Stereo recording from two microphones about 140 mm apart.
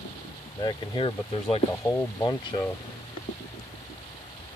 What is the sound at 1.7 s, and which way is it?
Speech, 20° left (ahead or behind).